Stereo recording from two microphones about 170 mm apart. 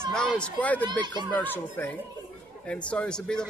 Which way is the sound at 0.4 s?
10° left (ahead or behind).